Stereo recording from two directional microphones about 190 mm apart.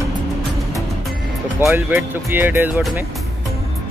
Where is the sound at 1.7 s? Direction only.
15° right (ahead or behind).